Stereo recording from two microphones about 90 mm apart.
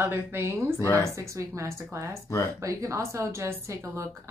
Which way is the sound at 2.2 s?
35° left (ahead or behind).